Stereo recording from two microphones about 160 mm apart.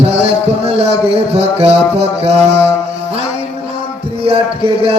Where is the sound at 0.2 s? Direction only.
40° right (ahead or behind).